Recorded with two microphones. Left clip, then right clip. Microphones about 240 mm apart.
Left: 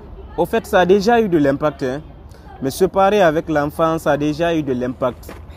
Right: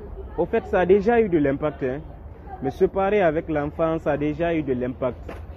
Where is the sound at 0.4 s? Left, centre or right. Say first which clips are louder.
Left 6 dB; left.